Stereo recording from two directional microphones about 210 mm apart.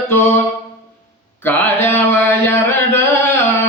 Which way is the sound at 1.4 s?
10° left (ahead or behind).